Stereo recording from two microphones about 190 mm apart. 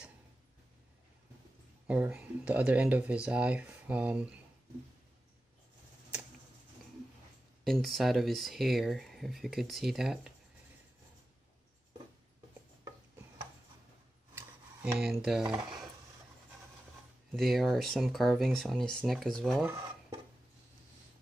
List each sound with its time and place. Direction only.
1.9 s speech: 10° right (ahead or behind)
7.6 s speech: centre (ahead or behind)
14.3 s a sound: 10° right (ahead or behind)
17.3 s speech: centre (ahead or behind)